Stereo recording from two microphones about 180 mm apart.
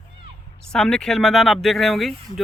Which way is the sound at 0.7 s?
5° left (ahead or behind).